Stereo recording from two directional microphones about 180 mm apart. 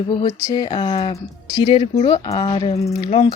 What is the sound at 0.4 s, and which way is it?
Speech, 25° left (ahead or behind).